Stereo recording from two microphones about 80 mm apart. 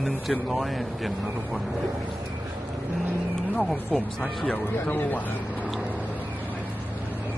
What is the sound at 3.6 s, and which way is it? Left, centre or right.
Speech, centre.